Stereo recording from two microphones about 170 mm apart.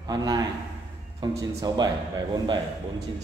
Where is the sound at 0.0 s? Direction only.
20° right (ahead or behind).